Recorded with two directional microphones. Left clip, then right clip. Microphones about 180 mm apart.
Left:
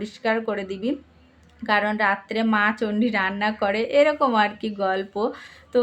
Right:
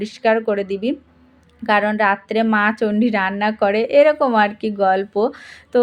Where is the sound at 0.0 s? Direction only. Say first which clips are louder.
Right 7 dB; 30° right (ahead or behind).